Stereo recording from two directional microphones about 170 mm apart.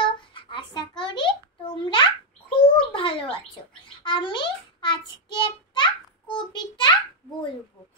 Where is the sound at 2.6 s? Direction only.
30° left (ahead or behind).